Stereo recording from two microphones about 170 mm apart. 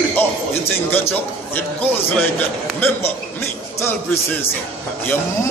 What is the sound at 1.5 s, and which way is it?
Speech, 10° left (ahead or behind).